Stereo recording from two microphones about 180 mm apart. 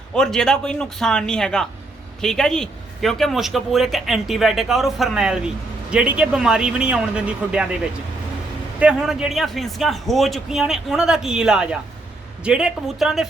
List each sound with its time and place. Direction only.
0.1 s speech: 5° left (ahead or behind)
8.8 s speech: 5° right (ahead or behind)